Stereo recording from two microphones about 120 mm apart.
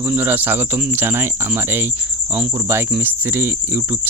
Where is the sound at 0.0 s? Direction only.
15° right (ahead or behind).